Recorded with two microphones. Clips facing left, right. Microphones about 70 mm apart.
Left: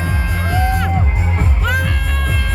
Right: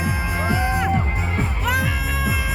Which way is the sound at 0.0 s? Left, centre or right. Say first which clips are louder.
Left 1 dB; centre.